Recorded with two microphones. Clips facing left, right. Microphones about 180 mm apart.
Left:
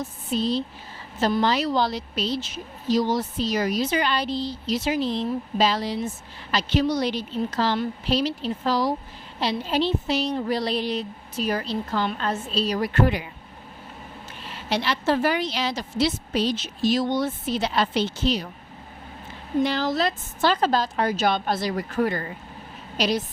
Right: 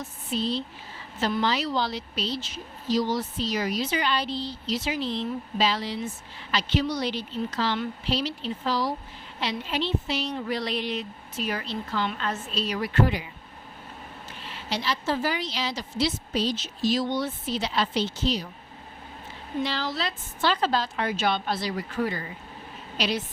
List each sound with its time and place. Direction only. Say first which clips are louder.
0.0 s a woman's voice: left 4 dB; 40° left (ahead or behind)
14.7 s a woman's voice: left 5 dB; 65° left (ahead or behind)
19.6 s a woman's voice: left 6 dB; 45° left (ahead or behind)
23.0 s a woman's voice: left 4 dB; 40° left (ahead or behind)